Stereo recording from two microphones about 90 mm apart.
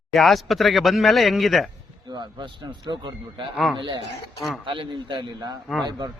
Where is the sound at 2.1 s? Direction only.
60° right (ahead or behind).